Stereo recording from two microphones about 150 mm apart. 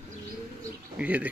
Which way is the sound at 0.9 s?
10° right (ahead or behind).